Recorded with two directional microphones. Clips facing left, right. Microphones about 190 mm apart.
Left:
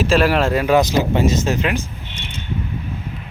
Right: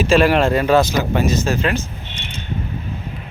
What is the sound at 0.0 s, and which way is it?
Speech, centre (ahead or behind).